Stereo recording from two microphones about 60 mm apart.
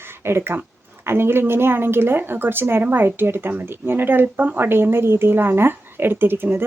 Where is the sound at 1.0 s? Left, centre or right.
Right.